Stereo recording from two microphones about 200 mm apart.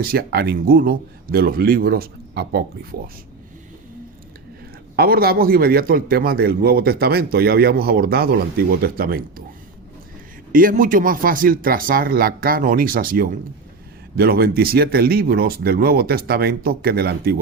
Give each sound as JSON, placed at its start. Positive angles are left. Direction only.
{"t": 0.0, "sound": "a man's voice", "side_deg": -50}
{"t": 4.9, "sound": "a man's voice", "side_deg": -50}
{"t": 10.5, "sound": "a man's voice", "side_deg": -45}